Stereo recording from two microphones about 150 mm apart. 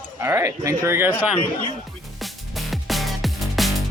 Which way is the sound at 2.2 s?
Centre (ahead or behind).